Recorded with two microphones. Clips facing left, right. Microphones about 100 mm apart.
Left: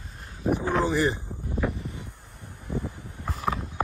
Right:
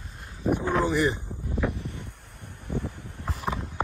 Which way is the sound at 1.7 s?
70° right (ahead or behind).